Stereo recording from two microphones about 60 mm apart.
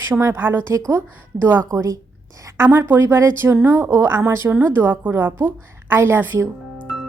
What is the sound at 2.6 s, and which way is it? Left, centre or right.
A woman's voice, right.